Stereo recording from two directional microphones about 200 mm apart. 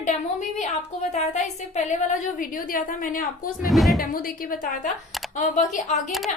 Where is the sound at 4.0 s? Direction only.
45° left (ahead or behind).